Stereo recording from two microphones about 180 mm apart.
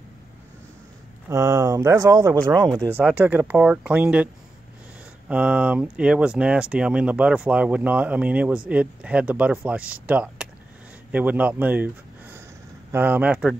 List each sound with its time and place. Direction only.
1.3 s speech: 15° right (ahead or behind)
5.3 s speech: 5° right (ahead or behind)